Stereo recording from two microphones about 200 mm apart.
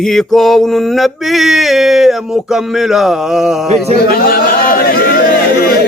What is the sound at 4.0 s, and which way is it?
Chatter, 50° left (ahead or behind).